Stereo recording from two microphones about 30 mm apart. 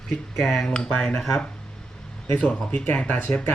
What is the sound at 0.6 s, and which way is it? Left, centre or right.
Speech, left.